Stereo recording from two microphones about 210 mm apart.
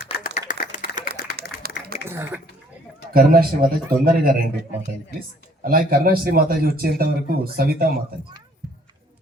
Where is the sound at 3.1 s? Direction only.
45° right (ahead or behind).